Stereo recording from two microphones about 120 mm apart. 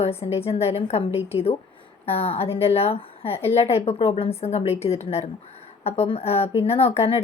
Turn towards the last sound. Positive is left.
turn(degrees=55)  # may be behind; listen again after turning